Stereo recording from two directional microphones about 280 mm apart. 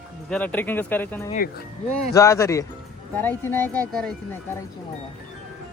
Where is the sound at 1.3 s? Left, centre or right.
Left.